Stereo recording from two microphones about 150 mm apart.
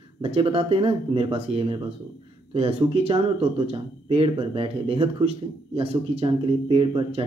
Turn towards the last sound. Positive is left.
turn(degrees=-35)  # may be behind; listen again after turning